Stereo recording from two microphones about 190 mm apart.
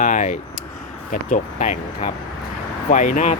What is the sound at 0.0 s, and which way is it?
Speech, 45° left (ahead or behind).